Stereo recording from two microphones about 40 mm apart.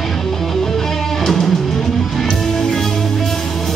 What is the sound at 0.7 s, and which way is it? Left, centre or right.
Music, centre.